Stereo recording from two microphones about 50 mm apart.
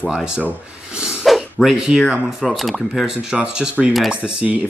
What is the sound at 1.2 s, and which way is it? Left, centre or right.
Dog, centre.